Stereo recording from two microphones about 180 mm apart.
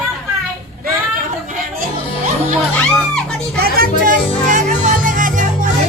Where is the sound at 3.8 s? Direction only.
45° right (ahead or behind).